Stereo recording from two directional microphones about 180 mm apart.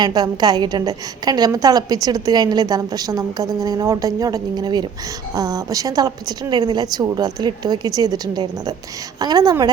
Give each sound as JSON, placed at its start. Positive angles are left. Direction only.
{"t": 0.0, "sound": "a woman's voice", "side_deg": -20}